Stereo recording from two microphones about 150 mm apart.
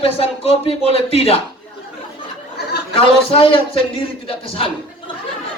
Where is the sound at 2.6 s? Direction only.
90° left.